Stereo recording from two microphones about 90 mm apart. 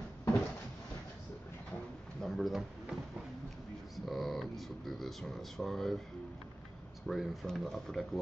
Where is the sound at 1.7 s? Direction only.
10° left (ahead or behind).